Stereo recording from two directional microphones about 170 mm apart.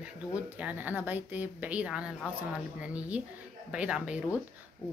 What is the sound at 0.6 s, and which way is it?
A woman's voice, 10° right (ahead or behind).